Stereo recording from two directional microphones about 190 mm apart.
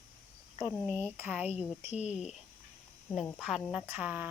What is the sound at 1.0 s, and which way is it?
Speech, 10° right (ahead or behind).